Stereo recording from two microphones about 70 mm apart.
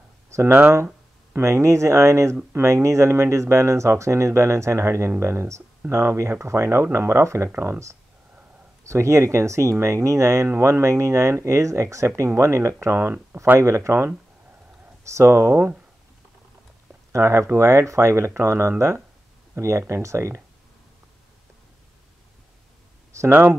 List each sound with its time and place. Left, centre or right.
0.5 s speech: right
1.3 s speech: right
8.8 s speech: right
17.1 s speech: right
23.1 s speech: right